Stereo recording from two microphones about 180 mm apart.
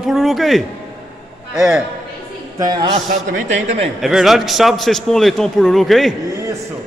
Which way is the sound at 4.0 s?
Centre (ahead or behind).